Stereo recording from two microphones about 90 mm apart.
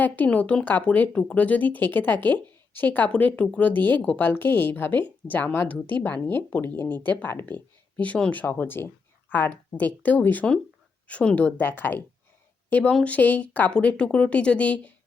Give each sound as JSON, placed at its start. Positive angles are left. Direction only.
{"t": 0.0, "sound": "speech", "side_deg": 15}